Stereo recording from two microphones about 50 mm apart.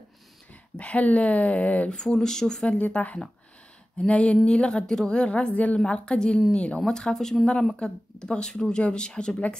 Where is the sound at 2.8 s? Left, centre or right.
Left.